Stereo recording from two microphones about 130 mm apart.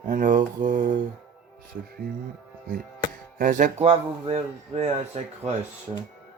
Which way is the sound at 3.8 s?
50° right (ahead or behind).